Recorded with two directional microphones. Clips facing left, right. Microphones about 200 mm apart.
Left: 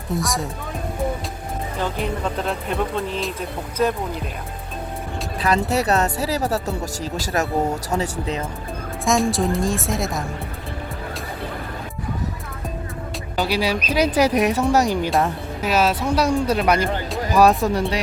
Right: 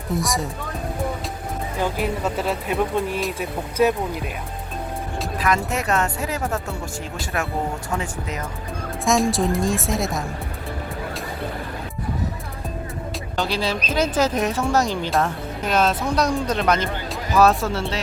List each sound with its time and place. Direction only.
0.1 s speech: centre (ahead or behind)
1.8 s speech: 5° right (ahead or behind)
5.4 s speech: 35° left (ahead or behind)
9.3 s speech: centre (ahead or behind)
13.3 s speech: 10° left (ahead or behind)